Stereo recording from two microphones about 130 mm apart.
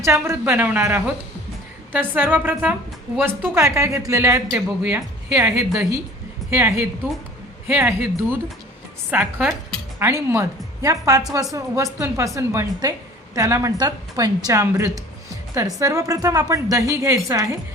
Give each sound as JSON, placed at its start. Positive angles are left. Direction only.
{"t": 0.0, "sound": "a woman's voice", "side_deg": -20}